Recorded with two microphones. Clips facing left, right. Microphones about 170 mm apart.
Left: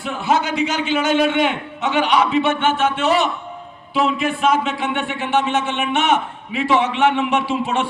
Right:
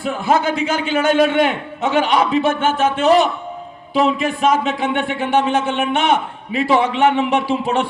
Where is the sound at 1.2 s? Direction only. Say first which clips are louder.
Right 3 dB; 40° right (ahead or behind).